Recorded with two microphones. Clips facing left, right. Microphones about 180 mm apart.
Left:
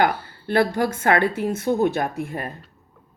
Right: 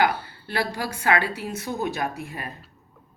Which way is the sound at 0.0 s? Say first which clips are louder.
Left 2 dB; 50° left (ahead or behind).